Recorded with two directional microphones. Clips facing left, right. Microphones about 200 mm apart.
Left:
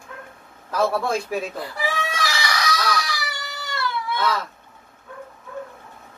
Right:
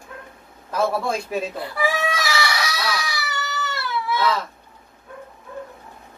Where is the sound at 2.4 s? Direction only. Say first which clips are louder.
Left 1 dB; 5° right (ahead or behind).